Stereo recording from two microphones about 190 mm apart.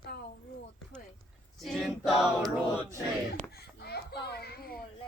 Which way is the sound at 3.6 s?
60° left (ahead or behind).